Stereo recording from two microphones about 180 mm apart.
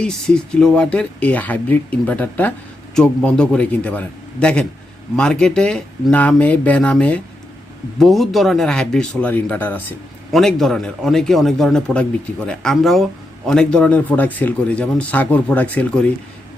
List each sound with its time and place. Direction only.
0.0 s speech: 5° left (ahead or behind)